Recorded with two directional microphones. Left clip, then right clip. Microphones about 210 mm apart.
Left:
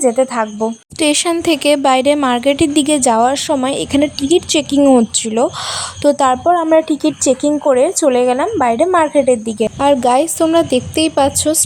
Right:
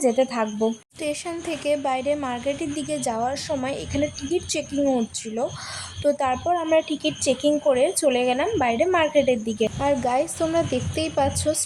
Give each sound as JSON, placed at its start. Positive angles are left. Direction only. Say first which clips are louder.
{"t": 0.0, "sound": "a woman's voice", "louder": "left 7 dB", "side_deg": 20}
{"t": 0.9, "sound": "a woman's voice", "louder": "left 14 dB", "side_deg": 45}
{"t": 9.8, "sound": "speech", "louder": "left 12 dB", "side_deg": 40}